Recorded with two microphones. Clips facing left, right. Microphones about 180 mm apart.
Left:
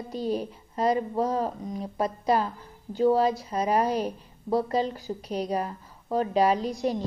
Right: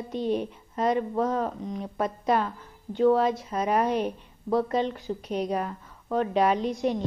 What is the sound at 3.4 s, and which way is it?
A woman's voice, 35° left (ahead or behind).